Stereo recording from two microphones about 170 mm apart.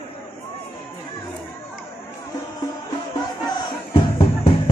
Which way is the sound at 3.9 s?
30° left (ahead or behind).